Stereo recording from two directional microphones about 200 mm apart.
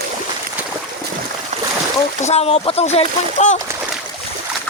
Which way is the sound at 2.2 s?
30° left (ahead or behind).